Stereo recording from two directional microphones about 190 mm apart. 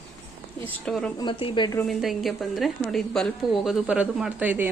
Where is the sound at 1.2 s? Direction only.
25° left (ahead or behind).